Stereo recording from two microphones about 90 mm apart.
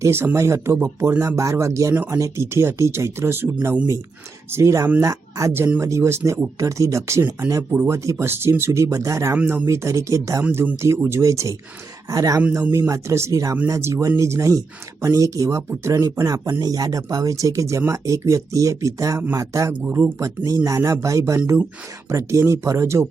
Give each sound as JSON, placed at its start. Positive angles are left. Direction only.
{"t": 0.0, "sound": "speech", "side_deg": -25}
{"t": 6.6, "sound": "speech", "side_deg": -35}
{"t": 9.3, "sound": "speech", "side_deg": -20}
{"t": 9.6, "sound": "speech", "side_deg": -35}
{"t": 12.4, "sound": "speech", "side_deg": -15}
{"t": 12.9, "sound": "speech", "side_deg": -30}
{"t": 16.0, "sound": "speech", "side_deg": -45}
{"t": 19.8, "sound": "speech", "side_deg": -20}
{"t": 20.1, "sound": "speech", "side_deg": -35}